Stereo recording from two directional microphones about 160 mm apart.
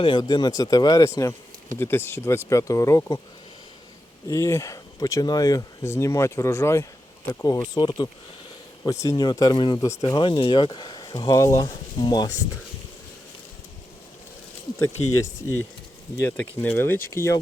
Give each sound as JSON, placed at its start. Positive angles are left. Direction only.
{"t": 0.0, "sound": "speech", "side_deg": 30}
{"t": 4.3, "sound": "speech", "side_deg": 20}
{"t": 14.8, "sound": "speech", "side_deg": 15}